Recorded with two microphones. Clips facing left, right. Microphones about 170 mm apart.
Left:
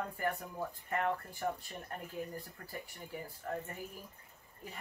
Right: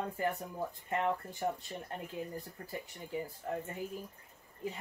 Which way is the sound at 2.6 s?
25° right (ahead or behind).